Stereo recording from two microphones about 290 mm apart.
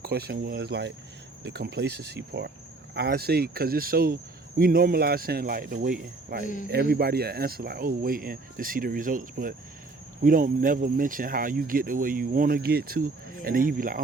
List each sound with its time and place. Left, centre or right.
0.0 s speech: right